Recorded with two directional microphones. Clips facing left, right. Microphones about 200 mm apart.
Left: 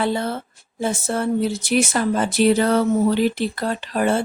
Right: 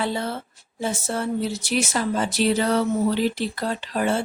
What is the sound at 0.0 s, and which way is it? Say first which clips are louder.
Speech: left 4 dB; 55° left (ahead or behind).